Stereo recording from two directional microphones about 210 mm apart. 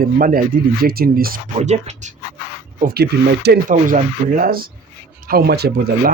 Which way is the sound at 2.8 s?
50° right (ahead or behind).